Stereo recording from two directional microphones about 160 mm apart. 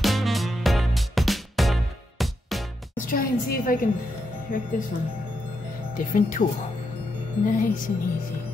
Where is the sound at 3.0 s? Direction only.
65° left (ahead or behind).